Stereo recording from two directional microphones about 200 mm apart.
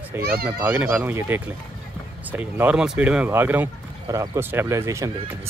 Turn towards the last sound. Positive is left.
turn(degrees=-15)  # may be behind; listen again after turning